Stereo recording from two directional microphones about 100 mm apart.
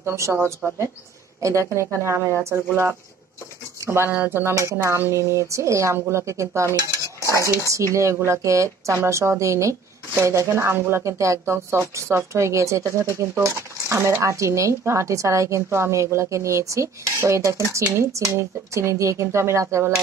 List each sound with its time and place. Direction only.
0.0 s speech: 30° right (ahead or behind)